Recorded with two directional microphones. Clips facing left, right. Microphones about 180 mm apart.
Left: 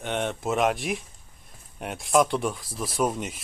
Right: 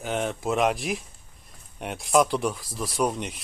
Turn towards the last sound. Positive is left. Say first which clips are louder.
# even
turn(degrees=0)  # may be behind; listen again after turning